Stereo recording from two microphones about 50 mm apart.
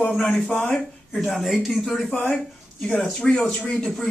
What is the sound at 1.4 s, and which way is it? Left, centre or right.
Speech, centre.